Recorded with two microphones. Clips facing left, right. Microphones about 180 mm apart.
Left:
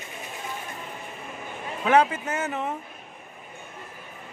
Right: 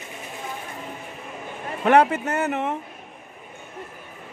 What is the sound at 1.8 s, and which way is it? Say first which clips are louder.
Speech: right 3 dB; 60° right (ahead or behind).